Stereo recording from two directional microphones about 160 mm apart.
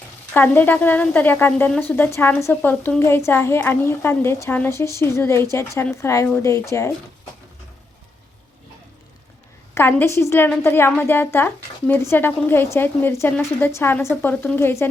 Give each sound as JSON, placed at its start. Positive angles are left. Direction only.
{"t": 0.3, "sound": "a woman's voice", "side_deg": 10}
{"t": 9.7, "sound": "a woman's voice", "side_deg": 15}